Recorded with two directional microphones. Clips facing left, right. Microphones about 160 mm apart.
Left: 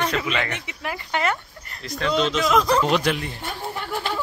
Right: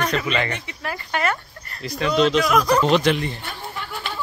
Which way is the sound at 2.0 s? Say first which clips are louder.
Right 4 dB; centre (ahead or behind).